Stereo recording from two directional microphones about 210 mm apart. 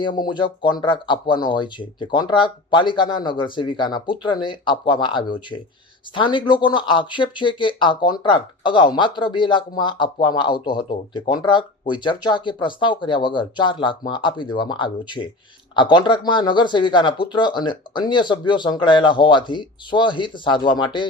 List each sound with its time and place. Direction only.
0.0 s speech: 20° left (ahead or behind)